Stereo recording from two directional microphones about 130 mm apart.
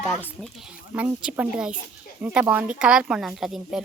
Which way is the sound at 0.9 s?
10° right (ahead or behind).